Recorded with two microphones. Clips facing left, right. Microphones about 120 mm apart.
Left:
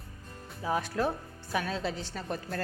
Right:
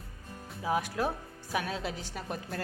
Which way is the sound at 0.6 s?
10° right (ahead or behind).